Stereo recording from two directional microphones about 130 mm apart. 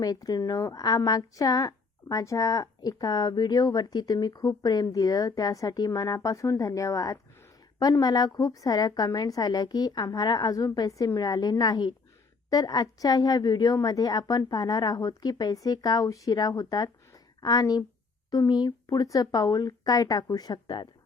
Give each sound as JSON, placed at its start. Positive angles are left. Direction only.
{"t": 0.0, "sound": "a woman's voice", "side_deg": 30}